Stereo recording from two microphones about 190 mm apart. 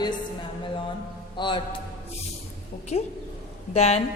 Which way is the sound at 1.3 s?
25° left (ahead or behind).